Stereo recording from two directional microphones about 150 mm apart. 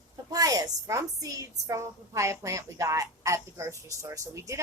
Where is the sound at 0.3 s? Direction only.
25° right (ahead or behind).